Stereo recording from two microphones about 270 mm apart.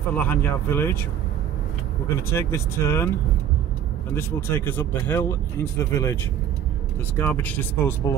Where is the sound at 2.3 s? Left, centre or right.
Centre.